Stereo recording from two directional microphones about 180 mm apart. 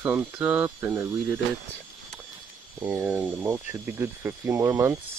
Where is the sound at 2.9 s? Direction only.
10° right (ahead or behind).